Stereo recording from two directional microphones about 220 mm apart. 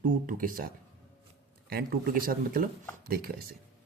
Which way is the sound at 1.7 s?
40° right (ahead or behind).